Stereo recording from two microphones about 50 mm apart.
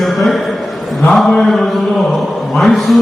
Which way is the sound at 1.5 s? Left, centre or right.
Centre.